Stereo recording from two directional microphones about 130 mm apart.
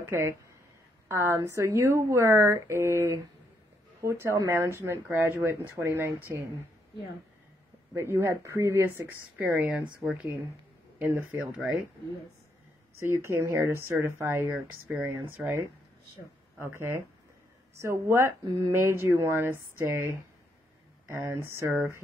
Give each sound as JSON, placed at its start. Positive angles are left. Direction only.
{"t": 0.0, "sound": "speech", "side_deg": -20}
{"t": 7.9, "sound": "speech", "side_deg": -20}
{"t": 13.0, "sound": "speech", "side_deg": -20}
{"t": 16.6, "sound": "speech", "side_deg": -20}